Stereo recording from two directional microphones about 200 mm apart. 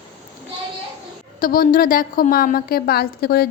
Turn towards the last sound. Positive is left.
turn(degrees=50)  # may be behind; listen again after turning